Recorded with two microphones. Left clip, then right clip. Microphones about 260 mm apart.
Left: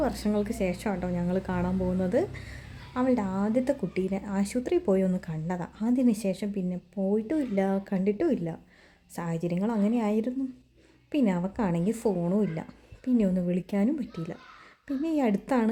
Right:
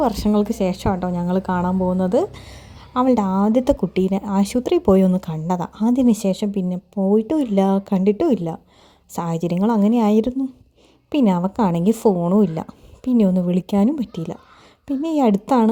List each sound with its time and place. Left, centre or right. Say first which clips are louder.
0.0 s a woman's voice: right 9 dB; right